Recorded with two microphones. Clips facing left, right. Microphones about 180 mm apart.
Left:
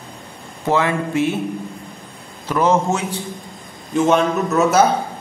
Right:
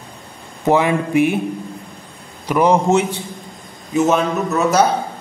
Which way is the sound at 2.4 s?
15° right (ahead or behind).